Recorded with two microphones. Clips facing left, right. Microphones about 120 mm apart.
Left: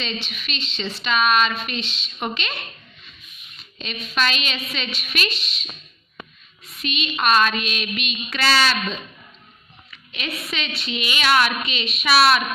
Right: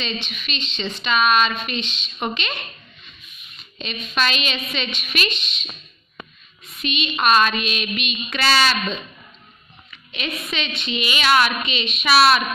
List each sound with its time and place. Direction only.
0.0 s a woman's voice: 5° left (ahead or behind)
3.7 s a woman's voice: centre (ahead or behind)
9.8 s a woman's voice: centre (ahead or behind)